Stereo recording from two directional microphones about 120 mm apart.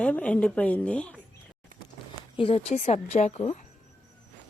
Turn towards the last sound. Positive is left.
turn(degrees=65)  # may be behind; listen again after turning